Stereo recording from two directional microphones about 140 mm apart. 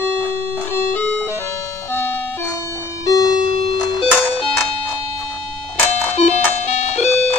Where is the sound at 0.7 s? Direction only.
15° left (ahead or behind).